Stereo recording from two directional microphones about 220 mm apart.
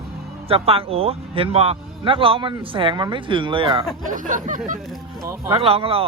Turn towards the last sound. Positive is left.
turn(degrees=-25)  # may be behind; listen again after turning